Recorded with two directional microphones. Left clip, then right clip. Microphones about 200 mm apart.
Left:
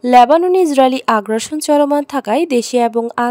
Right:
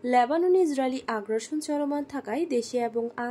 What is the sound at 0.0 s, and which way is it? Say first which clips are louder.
Speech: left 14 dB; 50° left (ahead or behind).